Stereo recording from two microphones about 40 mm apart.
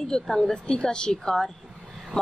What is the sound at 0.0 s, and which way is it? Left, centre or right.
A woman's voice, centre.